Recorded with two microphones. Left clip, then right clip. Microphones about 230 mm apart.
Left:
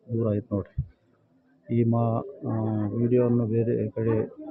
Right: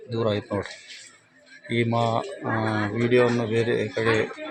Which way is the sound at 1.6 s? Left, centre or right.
Centre.